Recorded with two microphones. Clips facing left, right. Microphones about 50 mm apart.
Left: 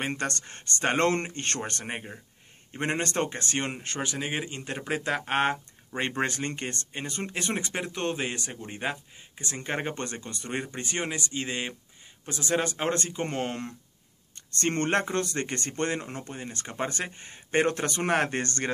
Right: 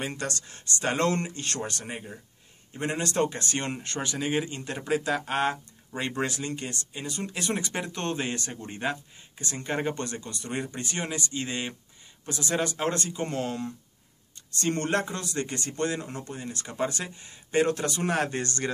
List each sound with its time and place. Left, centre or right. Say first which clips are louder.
0.0 s speech: left 2 dB; left
7.7 s speech: even; centre; by 18.7 s left